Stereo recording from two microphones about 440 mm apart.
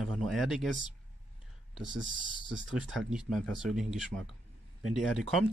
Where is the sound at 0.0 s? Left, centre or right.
Centre.